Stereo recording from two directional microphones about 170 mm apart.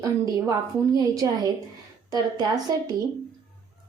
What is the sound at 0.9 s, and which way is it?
A woman's voice, 20° right (ahead or behind).